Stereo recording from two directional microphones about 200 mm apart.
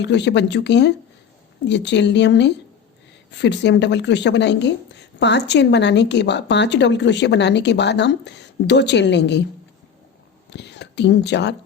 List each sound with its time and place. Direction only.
0.0 s a woman's voice: 60° left (ahead or behind)
10.5 s speech: 60° left (ahead or behind)